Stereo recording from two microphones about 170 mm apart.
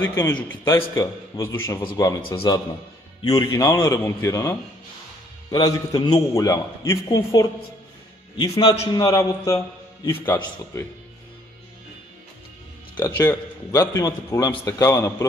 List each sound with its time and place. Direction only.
0.0 s a man's voice: 15° left (ahead or behind)
8.4 s a man's voice: 30° left (ahead or behind)
12.9 s a man's voice: 15° left (ahead or behind)